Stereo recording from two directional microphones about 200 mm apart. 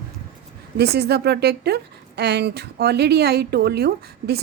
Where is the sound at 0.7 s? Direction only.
55° right (ahead or behind).